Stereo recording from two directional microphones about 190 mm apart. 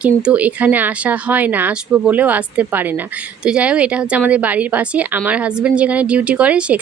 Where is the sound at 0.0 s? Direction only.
5° right (ahead or behind).